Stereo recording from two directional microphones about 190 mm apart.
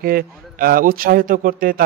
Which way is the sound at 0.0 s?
50° right (ahead or behind).